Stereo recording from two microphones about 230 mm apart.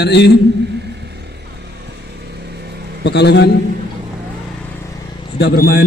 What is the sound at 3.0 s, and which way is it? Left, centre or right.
Speech, left.